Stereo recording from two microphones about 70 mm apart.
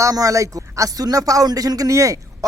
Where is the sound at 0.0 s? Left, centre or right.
Right.